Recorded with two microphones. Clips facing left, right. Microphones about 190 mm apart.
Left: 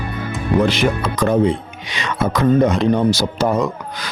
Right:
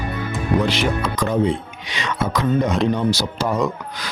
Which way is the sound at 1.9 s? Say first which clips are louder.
Left 3 dB; 55° left (ahead or behind).